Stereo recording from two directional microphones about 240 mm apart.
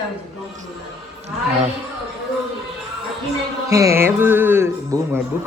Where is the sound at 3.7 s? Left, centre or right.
Centre.